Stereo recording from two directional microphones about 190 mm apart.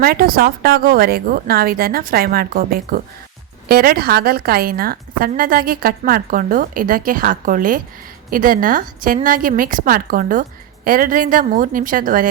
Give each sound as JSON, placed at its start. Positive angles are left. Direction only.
{"t": 0.0, "sound": "a woman's voice", "side_deg": -55}